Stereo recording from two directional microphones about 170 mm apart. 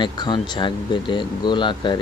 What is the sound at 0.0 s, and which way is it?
Speech, 25° left (ahead or behind).